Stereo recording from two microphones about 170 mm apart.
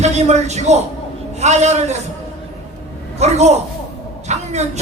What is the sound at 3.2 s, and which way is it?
Speech, 40° right (ahead or behind).